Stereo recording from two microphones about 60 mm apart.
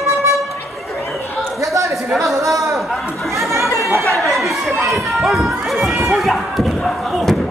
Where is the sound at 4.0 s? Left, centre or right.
Centre.